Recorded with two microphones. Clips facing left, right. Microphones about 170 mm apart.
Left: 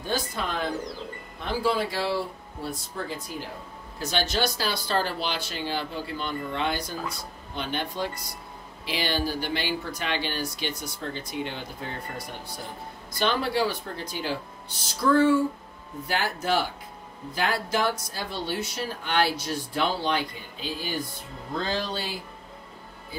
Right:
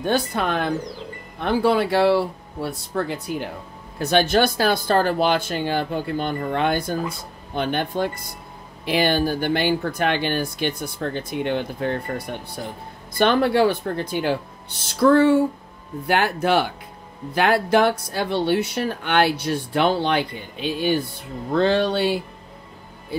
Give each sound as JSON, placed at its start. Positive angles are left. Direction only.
{"t": 0.0, "sound": "speech", "side_deg": -65}
{"t": 13.1, "sound": "speech", "side_deg": -55}